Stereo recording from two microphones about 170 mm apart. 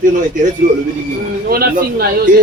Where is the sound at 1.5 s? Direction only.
65° right (ahead or behind).